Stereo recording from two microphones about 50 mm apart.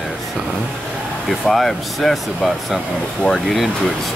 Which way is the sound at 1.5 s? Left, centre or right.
Centre.